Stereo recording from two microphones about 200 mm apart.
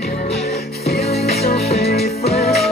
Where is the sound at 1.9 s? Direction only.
50° left (ahead or behind).